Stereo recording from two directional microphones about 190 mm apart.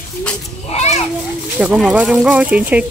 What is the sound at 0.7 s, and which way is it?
Children playing, 35° left (ahead or behind).